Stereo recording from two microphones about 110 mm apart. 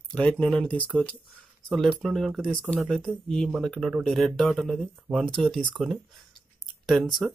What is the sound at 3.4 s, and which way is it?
Speech, 5° right (ahead or behind).